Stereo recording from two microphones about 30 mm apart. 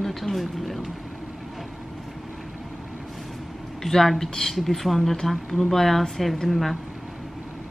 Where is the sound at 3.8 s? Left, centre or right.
Centre.